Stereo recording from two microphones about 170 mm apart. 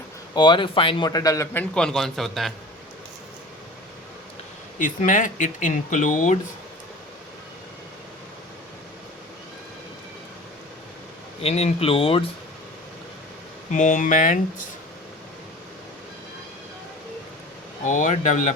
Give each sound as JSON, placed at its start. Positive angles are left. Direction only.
{"t": 0.3, "sound": "speech", "side_deg": 25}
{"t": 1.7, "sound": "a man's voice", "side_deg": 5}
{"t": 4.8, "sound": "speech", "side_deg": 50}
{"t": 11.4, "sound": "speech", "side_deg": 40}
{"t": 13.7, "sound": "speech", "side_deg": 45}
{"t": 17.8, "sound": "speech", "side_deg": 45}